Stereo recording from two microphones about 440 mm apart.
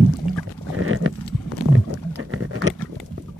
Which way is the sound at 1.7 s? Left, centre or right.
Right.